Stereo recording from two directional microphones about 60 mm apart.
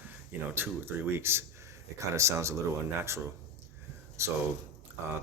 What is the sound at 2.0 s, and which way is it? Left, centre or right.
Speech, right.